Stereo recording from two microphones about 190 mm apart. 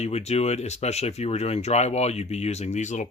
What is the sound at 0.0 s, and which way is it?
Speech, 35° left (ahead or behind).